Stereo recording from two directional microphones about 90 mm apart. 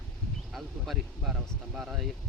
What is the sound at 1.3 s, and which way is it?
Speech, 10° right (ahead or behind).